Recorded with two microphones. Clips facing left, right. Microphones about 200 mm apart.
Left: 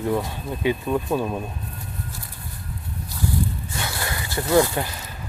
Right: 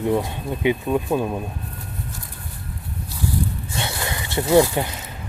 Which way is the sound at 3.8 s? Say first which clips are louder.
Right 3 dB; 25° right (ahead or behind).